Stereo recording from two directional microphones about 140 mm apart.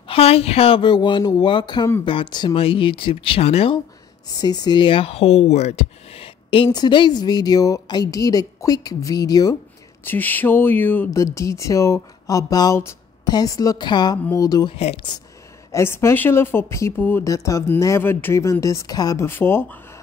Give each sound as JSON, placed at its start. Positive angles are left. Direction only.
{"t": 0.1, "sound": "speech", "side_deg": 45}
{"t": 4.3, "sound": "speech", "side_deg": 30}
{"t": 10.0, "sound": "a sound", "side_deg": 15}
{"t": 11.3, "sound": "speech", "side_deg": 20}
{"t": 15.7, "sound": "speech", "side_deg": 20}